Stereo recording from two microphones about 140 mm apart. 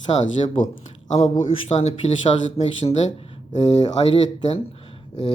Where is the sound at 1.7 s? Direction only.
50° left (ahead or behind).